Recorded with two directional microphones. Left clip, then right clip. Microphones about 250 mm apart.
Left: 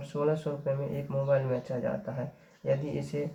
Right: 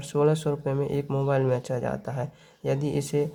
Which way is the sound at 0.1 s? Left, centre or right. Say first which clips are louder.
Right 6 dB; right.